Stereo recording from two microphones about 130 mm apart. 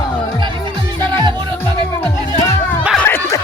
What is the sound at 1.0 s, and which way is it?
Music, 35° right (ahead or behind).